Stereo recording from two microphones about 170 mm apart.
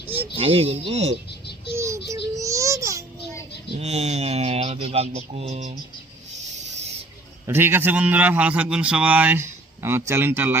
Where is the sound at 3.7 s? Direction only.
40° right (ahead or behind).